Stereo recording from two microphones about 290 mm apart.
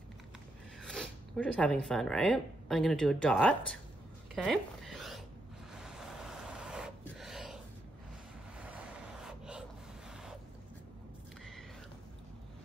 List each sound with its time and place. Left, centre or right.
0.8 s speech: centre
4.4 s zipper: centre
5.8 s vehicle: centre